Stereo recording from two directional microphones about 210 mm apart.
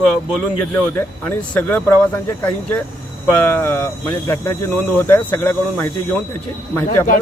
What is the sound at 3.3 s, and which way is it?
Speech, 10° left (ahead or behind).